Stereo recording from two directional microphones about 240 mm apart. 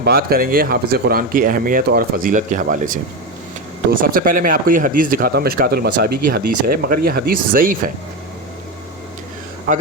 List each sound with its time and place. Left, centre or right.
0.0 s speech: right
4.0 s speech: right
9.7 s speech: right